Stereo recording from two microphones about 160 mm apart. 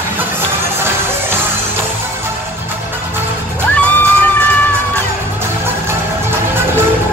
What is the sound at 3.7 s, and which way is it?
Music, 10° left (ahead or behind).